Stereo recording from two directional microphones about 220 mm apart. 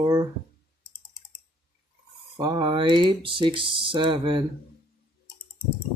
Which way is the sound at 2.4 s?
20° right (ahead or behind).